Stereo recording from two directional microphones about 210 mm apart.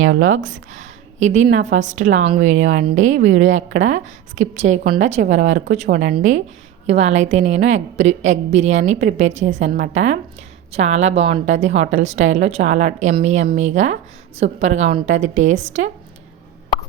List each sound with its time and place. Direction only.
0.0 s speech: 70° right (ahead or behind)
0.7 s a woman's voice: 35° right (ahead or behind)